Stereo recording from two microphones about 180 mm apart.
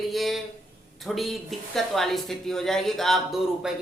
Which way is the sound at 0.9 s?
Centre (ahead or behind).